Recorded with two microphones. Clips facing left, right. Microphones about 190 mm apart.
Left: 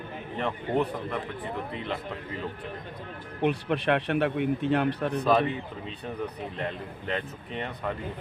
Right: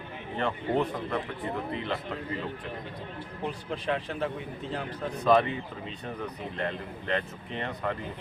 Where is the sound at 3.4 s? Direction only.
70° left (ahead or behind).